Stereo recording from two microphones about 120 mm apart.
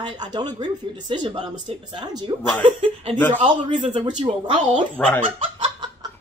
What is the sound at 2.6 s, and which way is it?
Speech, 50° right (ahead or behind).